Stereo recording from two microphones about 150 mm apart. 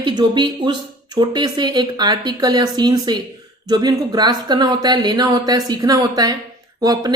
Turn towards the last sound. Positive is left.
turn(degrees=-25)  # may be behind; listen again after turning